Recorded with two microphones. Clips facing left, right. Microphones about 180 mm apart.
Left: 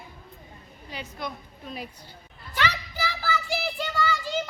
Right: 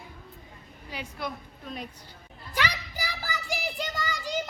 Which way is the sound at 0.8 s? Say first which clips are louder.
Even; 10° right (ahead or behind).